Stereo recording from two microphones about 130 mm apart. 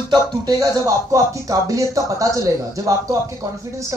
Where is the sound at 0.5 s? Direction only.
25° right (ahead or behind).